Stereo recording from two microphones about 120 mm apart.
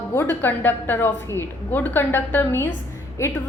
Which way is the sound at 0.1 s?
20° left (ahead or behind).